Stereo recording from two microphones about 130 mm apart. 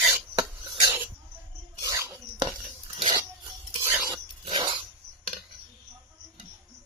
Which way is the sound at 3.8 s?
25° right (ahead or behind).